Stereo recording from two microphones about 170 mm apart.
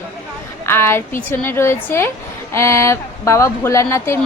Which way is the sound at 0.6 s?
15° left (ahead or behind).